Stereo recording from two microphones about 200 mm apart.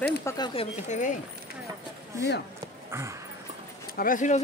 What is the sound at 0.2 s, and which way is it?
Speech, 15° left (ahead or behind).